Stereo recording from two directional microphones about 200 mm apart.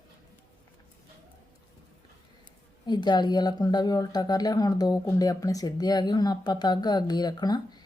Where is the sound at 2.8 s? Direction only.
20° left (ahead or behind).